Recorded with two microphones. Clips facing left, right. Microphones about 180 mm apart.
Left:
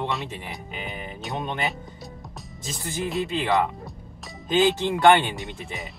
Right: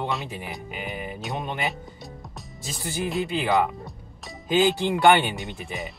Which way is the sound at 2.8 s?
Centre (ahead or behind).